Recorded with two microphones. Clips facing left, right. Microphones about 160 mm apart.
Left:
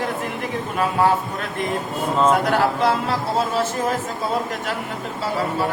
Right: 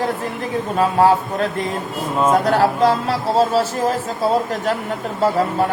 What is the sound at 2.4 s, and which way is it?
Speech, 35° right (ahead or behind).